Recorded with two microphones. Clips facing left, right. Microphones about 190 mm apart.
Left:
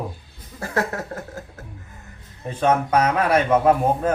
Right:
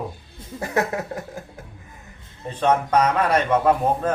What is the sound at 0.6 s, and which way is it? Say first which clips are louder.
Speech: right 1 dB; 15° right (ahead or behind).